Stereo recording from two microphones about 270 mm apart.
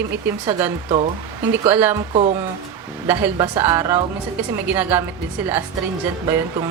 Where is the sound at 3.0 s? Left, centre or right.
Centre.